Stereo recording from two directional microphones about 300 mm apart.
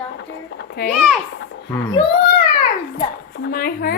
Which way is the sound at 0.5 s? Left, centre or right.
Left.